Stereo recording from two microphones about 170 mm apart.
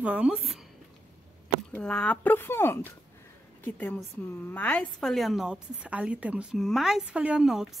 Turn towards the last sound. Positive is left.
turn(degrees=-5)  # may be behind; listen again after turning